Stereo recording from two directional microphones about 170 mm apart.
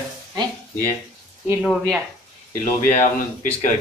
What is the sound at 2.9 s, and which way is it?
Speech, 45° left (ahead or behind).